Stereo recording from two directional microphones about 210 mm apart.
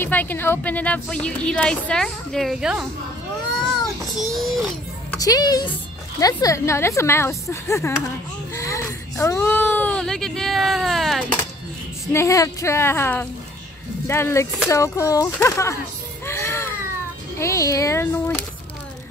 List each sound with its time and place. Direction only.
0.0 s speech: 10° left (ahead or behind)
4.2 s a sound: centre (ahead or behind)
5.2 s a woman's voice: 20° left (ahead or behind); by 11.3 s centre (ahead or behind)
12.1 s a woman's voice: 15° left (ahead or behind)
16.3 s baby cry: 10° left (ahead or behind)
17.4 s a woman's voice: 15° left (ahead or behind)